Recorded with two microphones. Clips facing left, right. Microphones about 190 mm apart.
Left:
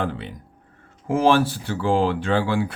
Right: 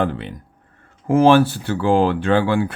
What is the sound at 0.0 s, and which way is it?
Speech, 65° right (ahead or behind).